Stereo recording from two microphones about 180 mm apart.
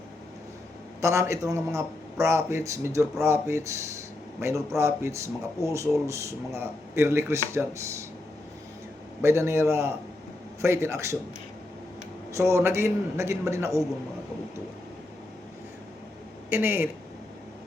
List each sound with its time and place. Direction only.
1.0 s a man's voice: 15° right (ahead or behind)
9.2 s a man's voice: 15° right (ahead or behind)
12.3 s a man's voice: 15° right (ahead or behind)
16.5 s a man's voice: 10° right (ahead or behind)